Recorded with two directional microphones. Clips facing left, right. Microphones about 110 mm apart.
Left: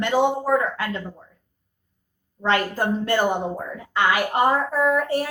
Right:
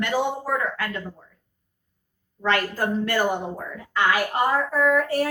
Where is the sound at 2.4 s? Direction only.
25° left (ahead or behind).